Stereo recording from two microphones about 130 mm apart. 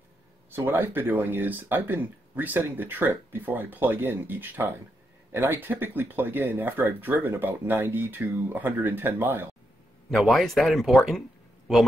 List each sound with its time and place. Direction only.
0.5 s speech: 15° right (ahead or behind)
10.1 s speech: centre (ahead or behind)